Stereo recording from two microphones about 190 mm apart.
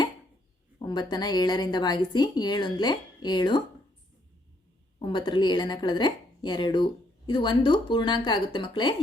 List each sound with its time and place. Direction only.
0.8 s a woman's voice: 20° left (ahead or behind)
4.9 s a woman's voice: 25° left (ahead or behind)